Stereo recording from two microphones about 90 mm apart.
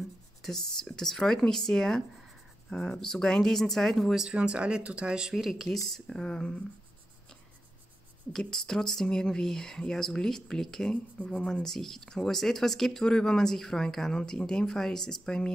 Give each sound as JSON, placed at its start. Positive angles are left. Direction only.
{"t": 0.4, "sound": "a sound", "side_deg": 5}
{"t": 0.8, "sound": "speech", "side_deg": 5}
{"t": 8.3, "sound": "speech", "side_deg": 5}